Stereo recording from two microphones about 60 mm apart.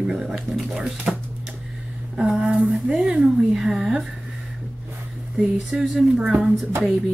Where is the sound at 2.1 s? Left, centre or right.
Centre.